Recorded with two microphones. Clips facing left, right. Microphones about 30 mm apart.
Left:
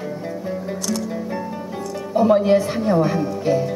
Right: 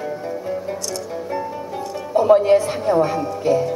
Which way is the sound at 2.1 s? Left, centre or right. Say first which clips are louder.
Right 2 dB; centre.